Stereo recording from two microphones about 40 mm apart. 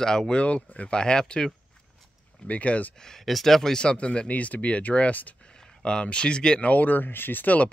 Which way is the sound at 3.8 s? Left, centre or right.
Left.